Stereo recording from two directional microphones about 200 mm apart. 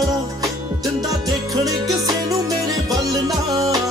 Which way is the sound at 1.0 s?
20° right (ahead or behind).